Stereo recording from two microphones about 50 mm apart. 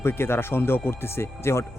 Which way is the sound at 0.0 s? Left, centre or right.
Left.